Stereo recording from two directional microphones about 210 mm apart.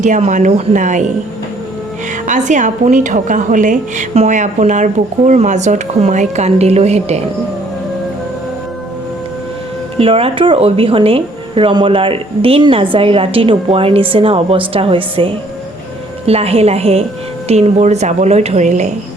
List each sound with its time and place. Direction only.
0.0 s a woman's voice: 35° right (ahead or behind)
2.2 s a woman's voice: 35° right (ahead or behind)
10.0 s a woman's voice: 25° right (ahead or behind)